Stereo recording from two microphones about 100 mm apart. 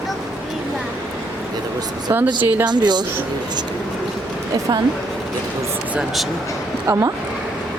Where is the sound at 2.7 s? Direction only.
45° right (ahead or behind).